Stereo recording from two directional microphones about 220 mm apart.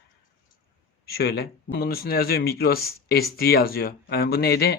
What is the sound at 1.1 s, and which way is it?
Speech, 45° left (ahead or behind).